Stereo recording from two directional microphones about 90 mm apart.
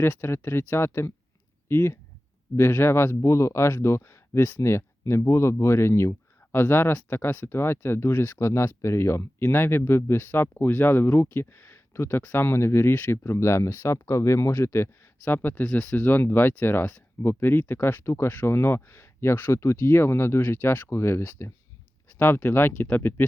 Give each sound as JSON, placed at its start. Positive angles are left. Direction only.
{"t": 0.0, "sound": "speech", "side_deg": 25}
{"t": 15.6, "sound": "speech", "side_deg": 10}